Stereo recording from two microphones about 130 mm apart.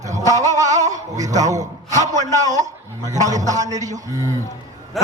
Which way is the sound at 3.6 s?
65° right (ahead or behind).